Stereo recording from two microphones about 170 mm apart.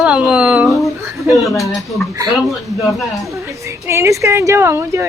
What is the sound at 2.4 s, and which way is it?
Speech, centre (ahead or behind).